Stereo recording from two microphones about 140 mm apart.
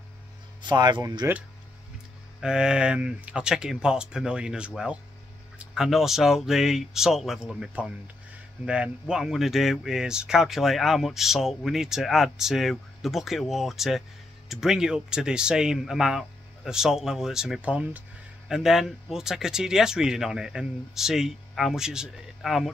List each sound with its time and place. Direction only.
0.6 s speech: 30° right (ahead or behind)
2.4 s speech: 5° right (ahead or behind)